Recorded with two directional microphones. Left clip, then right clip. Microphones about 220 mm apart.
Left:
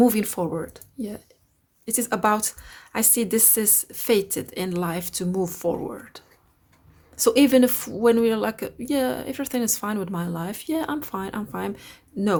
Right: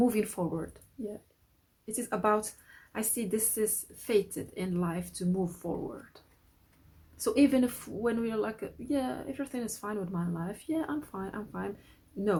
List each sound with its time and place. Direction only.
0.0 s a woman's voice: 30° left (ahead or behind)
1.8 s a woman's voice: 35° left (ahead or behind)